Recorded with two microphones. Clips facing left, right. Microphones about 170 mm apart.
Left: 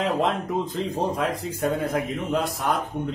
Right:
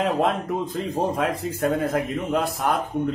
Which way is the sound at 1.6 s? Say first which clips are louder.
Right 2 dB; centre (ahead or behind).